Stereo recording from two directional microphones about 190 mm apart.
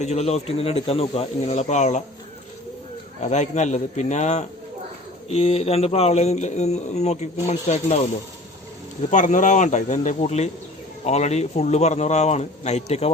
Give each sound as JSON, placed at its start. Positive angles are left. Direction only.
{"t": 0.0, "sound": "speech", "side_deg": 35}
{"t": 3.2, "sound": "speech", "side_deg": 35}
{"t": 9.0, "sound": "speech", "side_deg": 40}